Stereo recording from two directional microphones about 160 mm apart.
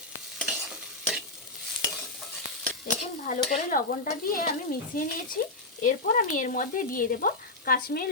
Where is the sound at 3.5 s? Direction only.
60° left (ahead or behind).